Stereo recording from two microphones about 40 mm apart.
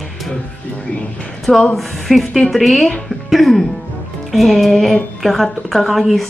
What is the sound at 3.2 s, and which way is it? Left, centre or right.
Speech, centre.